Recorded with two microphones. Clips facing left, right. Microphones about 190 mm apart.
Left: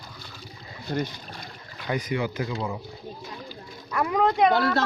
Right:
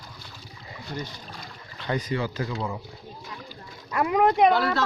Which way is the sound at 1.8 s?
15° left (ahead or behind).